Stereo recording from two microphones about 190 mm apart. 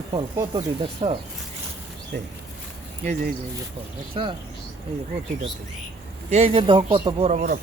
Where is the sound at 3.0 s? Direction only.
40° right (ahead or behind).